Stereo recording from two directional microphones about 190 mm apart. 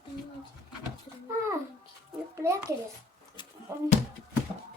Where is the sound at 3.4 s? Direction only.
25° left (ahead or behind).